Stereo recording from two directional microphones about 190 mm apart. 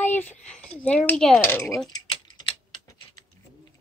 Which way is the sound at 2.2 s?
25° left (ahead or behind).